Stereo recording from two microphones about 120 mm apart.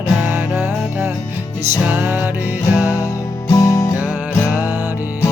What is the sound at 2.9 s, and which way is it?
Music, 25° left (ahead or behind).